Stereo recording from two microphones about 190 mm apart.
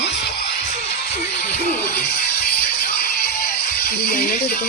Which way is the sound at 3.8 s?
55° left (ahead or behind).